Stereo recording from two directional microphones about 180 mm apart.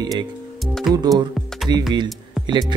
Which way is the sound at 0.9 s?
Centre (ahead or behind).